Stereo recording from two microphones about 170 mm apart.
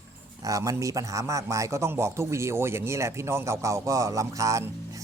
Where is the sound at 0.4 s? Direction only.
20° right (ahead or behind).